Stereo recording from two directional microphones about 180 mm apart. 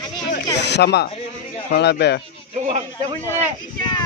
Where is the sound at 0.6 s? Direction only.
70° left (ahead or behind).